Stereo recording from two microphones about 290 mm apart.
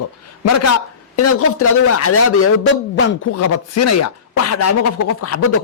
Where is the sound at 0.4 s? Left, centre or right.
Left.